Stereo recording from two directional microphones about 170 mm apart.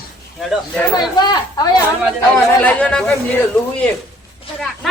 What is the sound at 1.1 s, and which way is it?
Speech, 25° left (ahead or behind).